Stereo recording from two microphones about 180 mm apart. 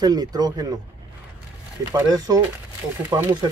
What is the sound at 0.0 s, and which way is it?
Speech, 20° right (ahead or behind).